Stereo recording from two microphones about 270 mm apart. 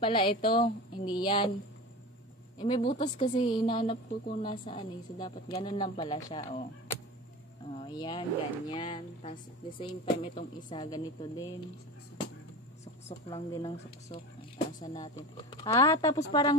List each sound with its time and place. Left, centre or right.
0.0 s speech: centre
2.6 s speech: left
7.7 s speech: centre
13.3 s speech: centre